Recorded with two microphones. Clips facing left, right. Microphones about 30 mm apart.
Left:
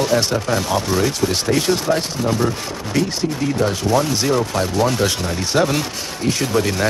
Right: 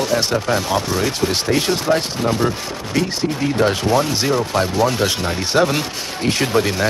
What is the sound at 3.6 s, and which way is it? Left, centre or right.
Speech, right.